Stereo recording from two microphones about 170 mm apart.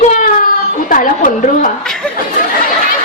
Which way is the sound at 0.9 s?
50° left (ahead or behind).